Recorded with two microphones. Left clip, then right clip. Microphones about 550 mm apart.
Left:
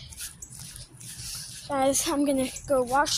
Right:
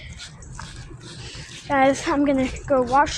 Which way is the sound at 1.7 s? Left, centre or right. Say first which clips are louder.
Right 6 dB; left.